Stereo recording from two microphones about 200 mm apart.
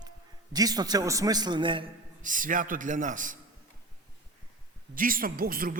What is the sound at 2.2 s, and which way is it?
A man's voice, 40° right (ahead or behind).